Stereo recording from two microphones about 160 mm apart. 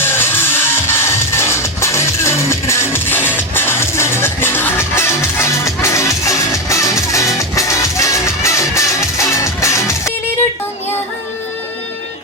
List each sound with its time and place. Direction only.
0.0 s music: 15° left (ahead or behind)